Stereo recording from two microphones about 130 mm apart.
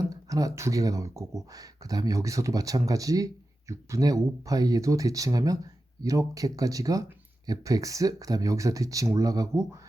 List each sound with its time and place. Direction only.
0.1 s speech: 25° right (ahead or behind)